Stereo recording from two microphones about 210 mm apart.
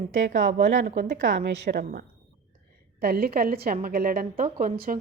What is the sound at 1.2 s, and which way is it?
A woman's voice, 55° right (ahead or behind).